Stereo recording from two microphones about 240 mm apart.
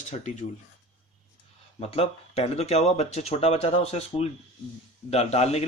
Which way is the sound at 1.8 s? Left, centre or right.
Left.